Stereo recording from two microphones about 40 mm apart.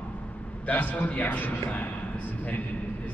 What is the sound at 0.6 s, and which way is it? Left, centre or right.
A man's voice, left.